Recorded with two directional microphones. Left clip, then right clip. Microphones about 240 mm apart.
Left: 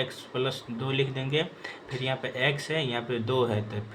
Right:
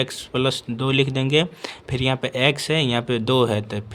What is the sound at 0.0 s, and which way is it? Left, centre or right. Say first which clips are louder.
Speech: right 7 dB; right.